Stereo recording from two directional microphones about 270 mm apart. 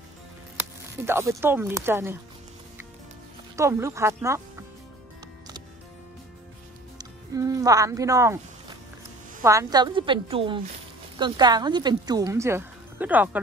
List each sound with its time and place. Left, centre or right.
1.0 s speech: centre
3.5 s speech: centre
7.0 s speech: centre
9.4 s speech: centre